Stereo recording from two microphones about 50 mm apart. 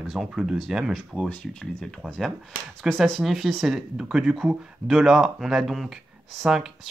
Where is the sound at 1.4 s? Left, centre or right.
Centre.